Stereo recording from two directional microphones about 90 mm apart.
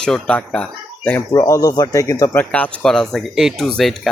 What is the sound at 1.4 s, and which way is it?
Speech, 40° left (ahead or behind).